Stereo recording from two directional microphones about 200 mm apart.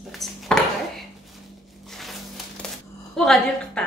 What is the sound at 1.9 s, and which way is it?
Crushing, centre (ahead or behind).